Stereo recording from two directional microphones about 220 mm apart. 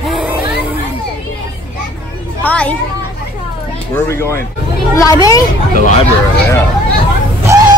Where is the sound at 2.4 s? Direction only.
5° left (ahead or behind).